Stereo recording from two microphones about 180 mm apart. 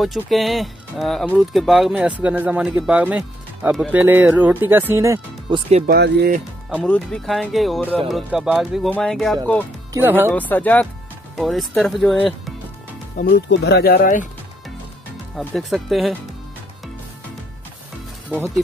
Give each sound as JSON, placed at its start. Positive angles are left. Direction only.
{"t": 0.0, "sound": "speech", "side_deg": 0}
{"t": 5.5, "sound": "speech", "side_deg": -35}
{"t": 5.9, "sound": "speech", "side_deg": -65}
{"t": 6.9, "sound": "speech", "side_deg": 5}
{"t": 9.9, "sound": "speech", "side_deg": -10}
{"t": 10.5, "sound": "speech", "side_deg": 10}
{"t": 13.2, "sound": "speech", "side_deg": 70}
{"t": 15.3, "sound": "speech", "side_deg": 0}